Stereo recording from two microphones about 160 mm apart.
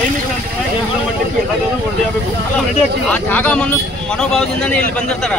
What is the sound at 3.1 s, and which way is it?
A man's voice, 10° left (ahead or behind).